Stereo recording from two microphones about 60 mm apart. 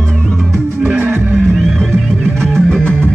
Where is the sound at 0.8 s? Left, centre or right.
Right.